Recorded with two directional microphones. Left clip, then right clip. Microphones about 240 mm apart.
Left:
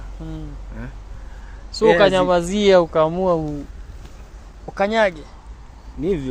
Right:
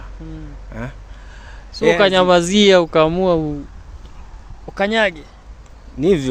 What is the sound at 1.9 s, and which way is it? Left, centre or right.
Speech, right.